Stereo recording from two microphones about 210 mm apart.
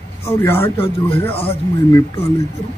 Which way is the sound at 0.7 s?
25° left (ahead or behind).